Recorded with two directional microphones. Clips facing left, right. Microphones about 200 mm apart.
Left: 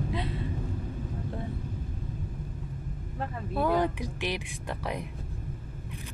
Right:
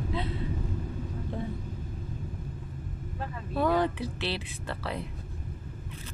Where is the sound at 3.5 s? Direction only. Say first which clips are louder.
Right 1 dB; 10° left (ahead or behind).